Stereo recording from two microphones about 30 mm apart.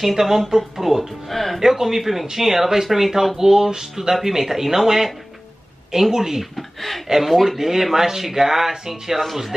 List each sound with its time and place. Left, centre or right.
0.0 s speech: centre
1.3 s speech: centre
1.6 s speech: centre
3.3 s a sound: centre
4.0 s speech: centre
6.5 s speech: centre